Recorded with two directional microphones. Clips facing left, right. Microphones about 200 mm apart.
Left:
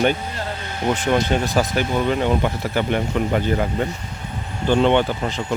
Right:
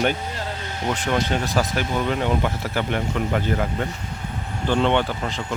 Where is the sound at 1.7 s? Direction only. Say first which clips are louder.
Left 3 dB; 5° left (ahead or behind).